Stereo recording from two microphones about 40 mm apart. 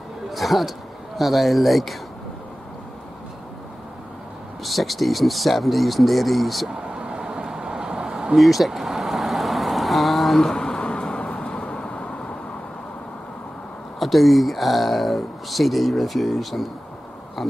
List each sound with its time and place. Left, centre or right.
0.3 s a man's voice: centre
4.6 s speech: centre
6.9 s a sound: right
8.4 s vehicle: centre
10.5 s a sound: centre
11.2 s vehicle: centre
11.6 s vehicle: left
13.9 s speech: centre